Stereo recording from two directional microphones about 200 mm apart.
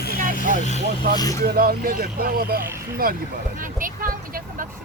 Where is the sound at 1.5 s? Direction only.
45° right (ahead or behind).